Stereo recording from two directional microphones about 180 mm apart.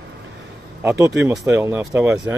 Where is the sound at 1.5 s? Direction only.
10° right (ahead or behind).